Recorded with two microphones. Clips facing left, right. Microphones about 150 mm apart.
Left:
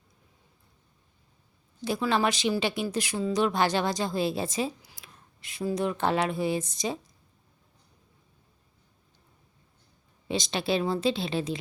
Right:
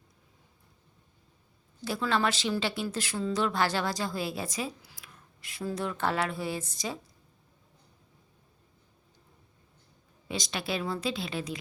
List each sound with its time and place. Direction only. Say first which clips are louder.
1.8 s speech: left 3 dB; 15° left (ahead or behind)
10.2 s speech: left 6 dB; 25° left (ahead or behind)